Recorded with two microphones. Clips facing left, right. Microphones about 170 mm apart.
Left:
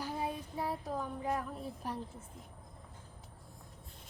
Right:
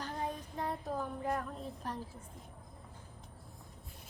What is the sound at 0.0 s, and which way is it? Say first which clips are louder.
Child singing: left 1 dB; 10° left (ahead or behind).